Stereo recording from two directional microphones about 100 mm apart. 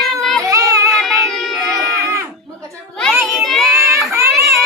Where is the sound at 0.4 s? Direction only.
35° right (ahead or behind).